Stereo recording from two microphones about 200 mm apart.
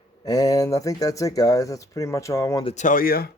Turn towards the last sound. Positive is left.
turn(degrees=45)  # may be behind; listen again after turning